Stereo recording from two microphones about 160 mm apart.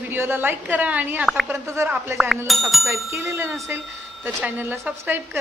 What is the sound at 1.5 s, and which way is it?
Speech, 15° right (ahead or behind).